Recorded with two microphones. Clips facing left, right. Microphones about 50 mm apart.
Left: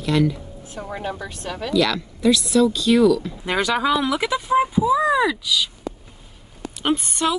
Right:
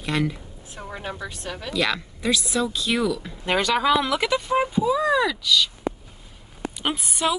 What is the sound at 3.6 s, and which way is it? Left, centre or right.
Speech, centre.